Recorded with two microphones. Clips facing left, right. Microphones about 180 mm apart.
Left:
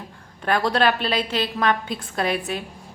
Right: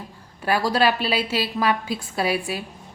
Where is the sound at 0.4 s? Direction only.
5° right (ahead or behind).